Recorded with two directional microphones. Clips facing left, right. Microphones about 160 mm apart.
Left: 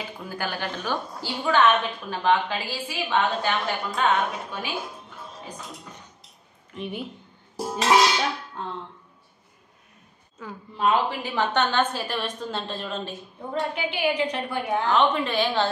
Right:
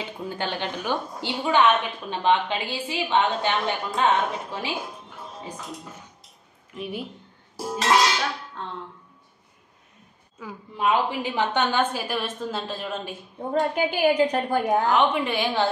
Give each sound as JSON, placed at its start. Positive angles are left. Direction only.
{"t": 0.0, "sound": "a woman's voice", "side_deg": -25}
{"t": 6.7, "sound": "a woman's voice", "side_deg": -5}
{"t": 7.5, "sound": "music", "side_deg": 20}
{"t": 10.4, "sound": "a woman's voice", "side_deg": -10}
{"t": 13.5, "sound": "a woman's voice", "side_deg": -45}
{"t": 14.9, "sound": "a woman's voice", "side_deg": -10}